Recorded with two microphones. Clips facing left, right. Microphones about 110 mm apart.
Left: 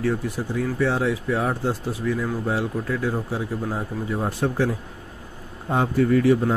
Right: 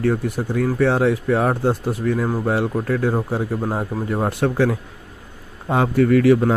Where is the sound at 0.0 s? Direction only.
55° right (ahead or behind).